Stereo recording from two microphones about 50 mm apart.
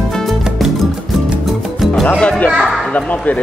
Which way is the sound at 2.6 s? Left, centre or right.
Centre.